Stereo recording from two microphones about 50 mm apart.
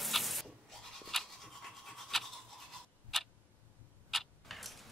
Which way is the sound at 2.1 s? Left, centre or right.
Centre.